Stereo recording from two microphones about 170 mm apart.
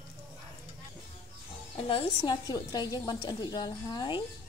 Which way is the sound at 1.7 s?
30° left (ahead or behind).